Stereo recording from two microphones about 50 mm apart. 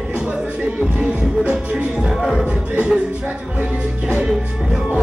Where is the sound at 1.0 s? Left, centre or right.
Centre.